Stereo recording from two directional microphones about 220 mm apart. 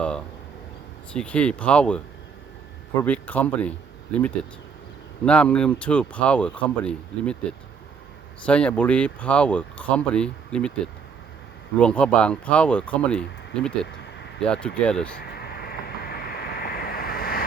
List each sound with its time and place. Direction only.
1.1 s speech: 5° left (ahead or behind)
3.0 s speech: 5° left (ahead or behind)
8.4 s speech: 5° left (ahead or behind)
11.8 s speech: 5° left (ahead or behind)
15.2 s vehicle: 45° left (ahead or behind)